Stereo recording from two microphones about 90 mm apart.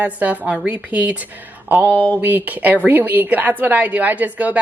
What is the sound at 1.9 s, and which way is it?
Speech, 20° left (ahead or behind).